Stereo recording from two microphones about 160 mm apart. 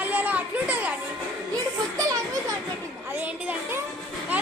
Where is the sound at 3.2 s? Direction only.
10° right (ahead or behind).